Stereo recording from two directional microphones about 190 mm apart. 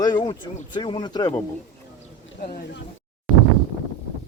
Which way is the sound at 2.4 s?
50° left (ahead or behind).